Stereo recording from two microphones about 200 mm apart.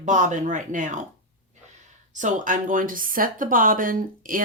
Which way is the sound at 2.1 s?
40° right (ahead or behind).